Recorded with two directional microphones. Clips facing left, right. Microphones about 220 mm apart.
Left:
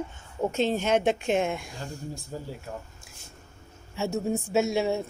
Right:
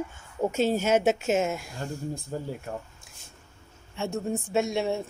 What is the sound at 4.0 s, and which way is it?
Speech, 5° left (ahead or behind).